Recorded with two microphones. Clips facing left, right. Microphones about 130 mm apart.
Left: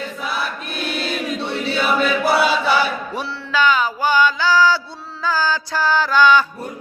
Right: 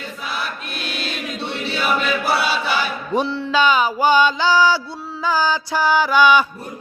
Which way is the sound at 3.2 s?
20° right (ahead or behind).